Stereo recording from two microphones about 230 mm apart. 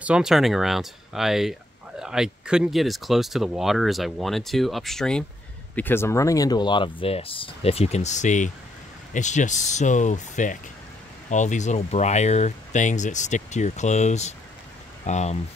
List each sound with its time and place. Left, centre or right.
0.0 s speech: centre; by 15.3 s left